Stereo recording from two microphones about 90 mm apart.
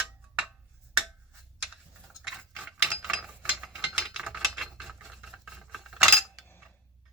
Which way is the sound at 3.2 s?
10° right (ahead or behind).